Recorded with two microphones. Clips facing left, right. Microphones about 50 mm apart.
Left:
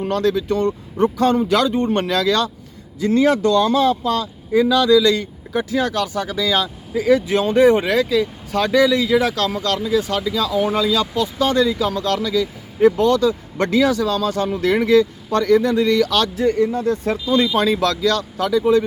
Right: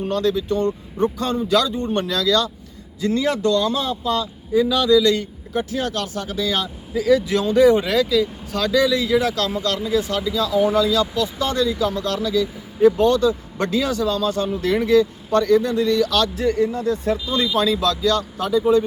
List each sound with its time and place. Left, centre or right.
0.1 s speech: left
1.5 s speech: left
10.1 s speech: left